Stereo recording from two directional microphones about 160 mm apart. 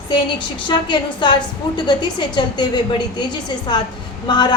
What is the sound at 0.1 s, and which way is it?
A woman's voice, 30° left (ahead or behind).